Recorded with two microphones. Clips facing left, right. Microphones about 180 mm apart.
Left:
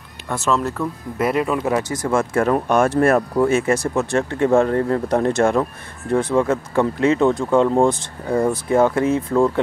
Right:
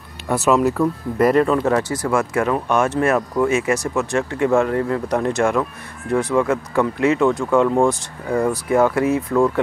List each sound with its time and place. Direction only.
0.3 s speech: 10° right (ahead or behind)
1.1 s speech: 5° left (ahead or behind); by 2.4 s 25° left (ahead or behind)
2.4 s speech: 40° left (ahead or behind)